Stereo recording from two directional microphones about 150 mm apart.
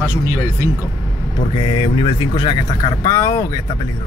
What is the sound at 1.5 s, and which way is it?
Speech, 35° left (ahead or behind).